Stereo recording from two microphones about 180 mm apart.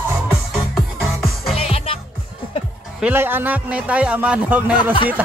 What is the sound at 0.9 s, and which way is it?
Music, centre (ahead or behind).